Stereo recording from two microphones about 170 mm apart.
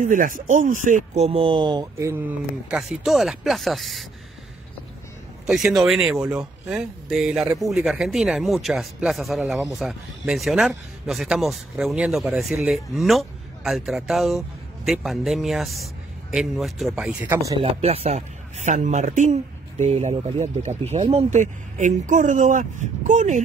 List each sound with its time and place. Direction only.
0.0 s speech: 50° right (ahead or behind); by 4.0 s centre (ahead or behind)
5.5 s speech: centre (ahead or behind)
17.6 s speech: 35° right (ahead or behind)